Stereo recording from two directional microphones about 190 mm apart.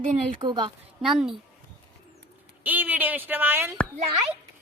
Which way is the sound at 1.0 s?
Centre (ahead or behind).